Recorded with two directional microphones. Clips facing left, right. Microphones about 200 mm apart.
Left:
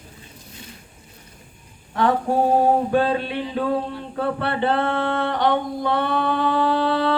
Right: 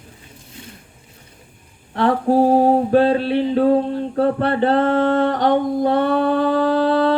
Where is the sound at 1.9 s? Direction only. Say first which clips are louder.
Right 4 dB; 35° right (ahead or behind).